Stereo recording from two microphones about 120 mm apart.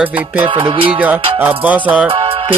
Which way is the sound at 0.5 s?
45° right (ahead or behind).